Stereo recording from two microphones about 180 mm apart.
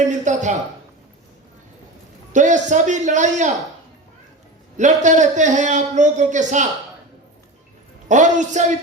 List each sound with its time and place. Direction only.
0.1 s a sound: 40° right (ahead or behind)
2.3 s a man's voice: 45° right (ahead or behind)
4.8 s a man's voice: 40° right (ahead or behind)
8.0 s a man's voice: 45° right (ahead or behind)